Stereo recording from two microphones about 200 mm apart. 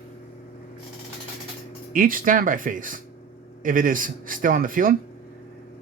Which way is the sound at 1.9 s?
45° right (ahead or behind).